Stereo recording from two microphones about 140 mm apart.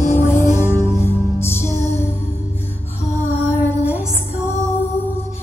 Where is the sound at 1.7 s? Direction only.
50° left (ahead or behind).